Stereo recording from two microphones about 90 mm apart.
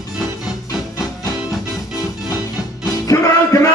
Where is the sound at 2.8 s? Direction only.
35° left (ahead or behind).